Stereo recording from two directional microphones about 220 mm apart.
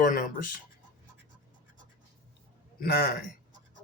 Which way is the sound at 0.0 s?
40° left (ahead or behind).